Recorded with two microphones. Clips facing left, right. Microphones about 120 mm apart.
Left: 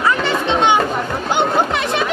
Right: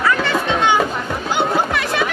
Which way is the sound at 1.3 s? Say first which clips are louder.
Left 1 dB; 20° left (ahead or behind).